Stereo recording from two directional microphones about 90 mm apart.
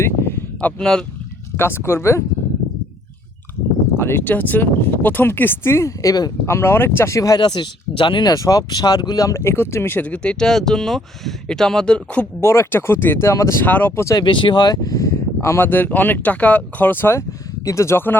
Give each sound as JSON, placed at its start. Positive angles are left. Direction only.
{"t": 0.0, "sound": "a sound", "side_deg": 30}
{"t": 0.6, "sound": "speech", "side_deg": 10}
{"t": 1.5, "sound": "speech", "side_deg": 25}
{"t": 3.9, "sound": "speech", "side_deg": 25}
{"t": 6.4, "sound": "speech", "side_deg": 30}
{"t": 7.3, "sound": "speech", "side_deg": 55}
{"t": 8.3, "sound": "speech", "side_deg": 40}
{"t": 10.1, "sound": "speech", "side_deg": 10}
{"t": 12.4, "sound": "speech", "side_deg": 30}
{"t": 13.7, "sound": "speech", "side_deg": 20}
{"t": 14.2, "sound": "speech", "side_deg": 65}